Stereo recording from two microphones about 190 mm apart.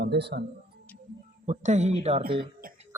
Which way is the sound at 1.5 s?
35° right (ahead or behind).